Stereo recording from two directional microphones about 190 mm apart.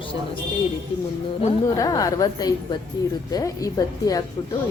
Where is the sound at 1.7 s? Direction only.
20° left (ahead or behind).